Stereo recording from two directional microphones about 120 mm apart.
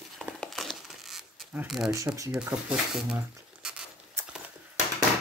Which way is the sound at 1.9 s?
25° right (ahead or behind).